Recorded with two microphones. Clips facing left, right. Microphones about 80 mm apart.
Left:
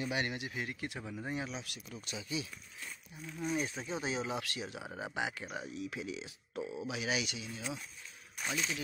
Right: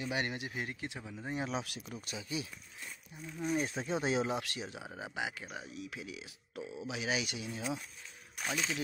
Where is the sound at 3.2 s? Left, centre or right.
Centre.